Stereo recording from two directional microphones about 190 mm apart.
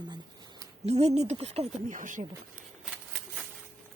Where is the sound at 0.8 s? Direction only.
35° right (ahead or behind).